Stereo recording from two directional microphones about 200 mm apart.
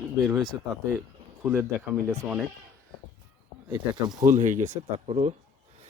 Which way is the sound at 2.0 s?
15° right (ahead or behind).